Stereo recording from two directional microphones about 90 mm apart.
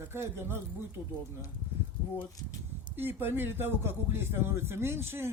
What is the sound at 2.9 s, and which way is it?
Speech, 25° right (ahead or behind).